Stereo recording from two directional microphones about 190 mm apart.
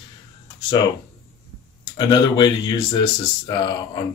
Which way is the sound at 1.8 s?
25° left (ahead or behind).